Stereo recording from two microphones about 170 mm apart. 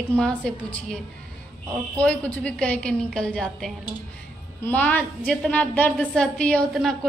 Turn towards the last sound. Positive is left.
turn(degrees=5)  # may be behind; listen again after turning